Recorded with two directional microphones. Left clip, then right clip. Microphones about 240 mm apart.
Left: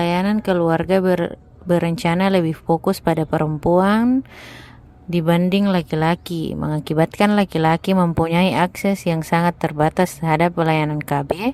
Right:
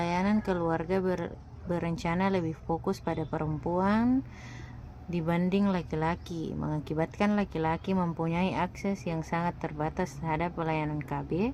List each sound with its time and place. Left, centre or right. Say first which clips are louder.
0.0 s speech: left 10 dB; left
5.1 s speech: left 12 dB; left